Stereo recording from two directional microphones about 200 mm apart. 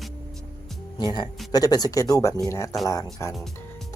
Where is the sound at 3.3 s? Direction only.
Centre (ahead or behind).